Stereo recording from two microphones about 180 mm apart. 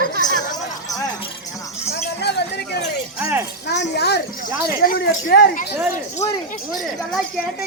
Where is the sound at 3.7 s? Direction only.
65° left (ahead or behind).